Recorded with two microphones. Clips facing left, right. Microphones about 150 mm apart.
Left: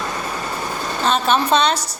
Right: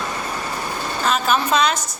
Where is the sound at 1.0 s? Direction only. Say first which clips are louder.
Left 2 dB; 30° left (ahead or behind).